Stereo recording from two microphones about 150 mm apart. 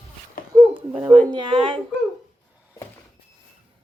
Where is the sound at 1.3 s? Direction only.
30° right (ahead or behind).